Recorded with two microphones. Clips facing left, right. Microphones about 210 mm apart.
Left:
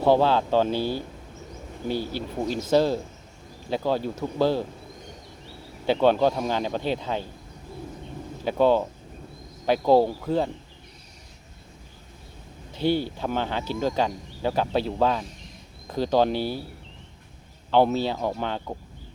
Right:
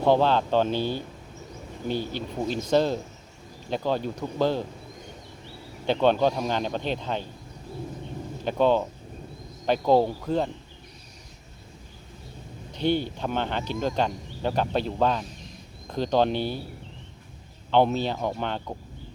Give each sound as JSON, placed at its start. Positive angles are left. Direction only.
{"t": 0.0, "sound": "speech", "side_deg": 10}
{"t": 5.8, "sound": "speech", "side_deg": 10}
{"t": 8.4, "sound": "speech", "side_deg": 10}
{"t": 12.7, "sound": "speech", "side_deg": 10}
{"t": 17.7, "sound": "speech", "side_deg": 10}